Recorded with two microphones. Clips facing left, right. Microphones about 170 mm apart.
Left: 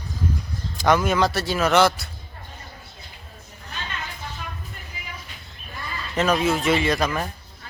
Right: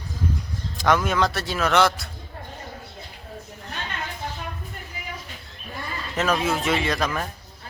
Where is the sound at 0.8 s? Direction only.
Centre (ahead or behind).